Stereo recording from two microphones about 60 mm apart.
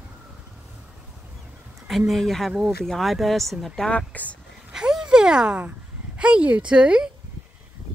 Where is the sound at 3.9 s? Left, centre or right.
Left.